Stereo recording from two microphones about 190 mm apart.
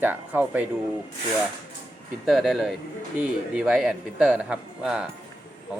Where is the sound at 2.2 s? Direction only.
Centre (ahead or behind).